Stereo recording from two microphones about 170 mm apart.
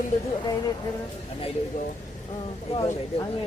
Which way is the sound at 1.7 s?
45° left (ahead or behind).